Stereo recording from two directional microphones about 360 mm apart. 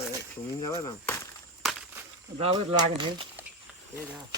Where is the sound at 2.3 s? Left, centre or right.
Centre.